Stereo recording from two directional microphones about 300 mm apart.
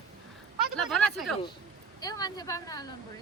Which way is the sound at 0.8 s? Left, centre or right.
Centre.